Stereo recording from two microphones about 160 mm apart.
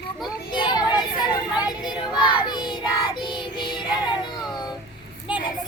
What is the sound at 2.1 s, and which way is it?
Child singing, 30° left (ahead or behind).